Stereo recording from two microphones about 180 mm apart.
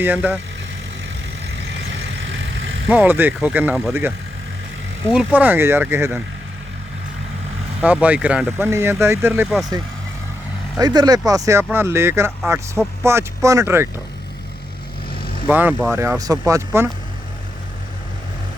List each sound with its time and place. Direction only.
0.0 s speech: 10° right (ahead or behind)
1.5 s vehicle: 90° right
2.9 s speech: 10° right (ahead or behind)
5.1 s speech: 10° right (ahead or behind)
7.8 s speech: 5° right (ahead or behind)
10.8 s speech: 20° right (ahead or behind)
15.4 s speech: 10° right (ahead or behind)